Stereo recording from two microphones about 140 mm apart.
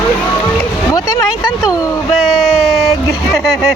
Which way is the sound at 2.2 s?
Centre (ahead or behind).